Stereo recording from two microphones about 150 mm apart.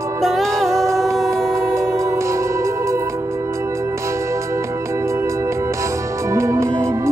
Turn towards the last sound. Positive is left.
turn(degrees=-20)  # may be behind; listen again after turning